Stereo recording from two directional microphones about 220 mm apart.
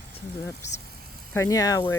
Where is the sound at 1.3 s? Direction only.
15° left (ahead or behind).